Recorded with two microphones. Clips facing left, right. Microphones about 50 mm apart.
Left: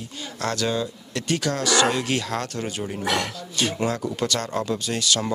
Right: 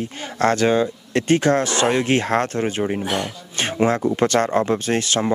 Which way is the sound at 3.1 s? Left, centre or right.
Left.